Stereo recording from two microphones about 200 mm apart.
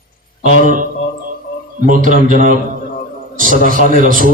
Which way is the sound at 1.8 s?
40° right (ahead or behind).